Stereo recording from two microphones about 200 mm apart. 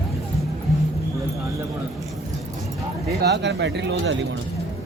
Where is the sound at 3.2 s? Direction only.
60° right (ahead or behind).